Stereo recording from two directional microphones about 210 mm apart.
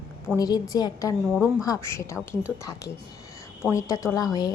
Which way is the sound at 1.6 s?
15° left (ahead or behind).